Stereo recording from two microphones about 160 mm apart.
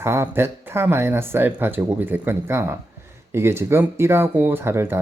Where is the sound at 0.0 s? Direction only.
15° right (ahead or behind).